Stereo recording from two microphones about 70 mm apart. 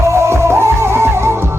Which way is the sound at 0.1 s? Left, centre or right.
Right.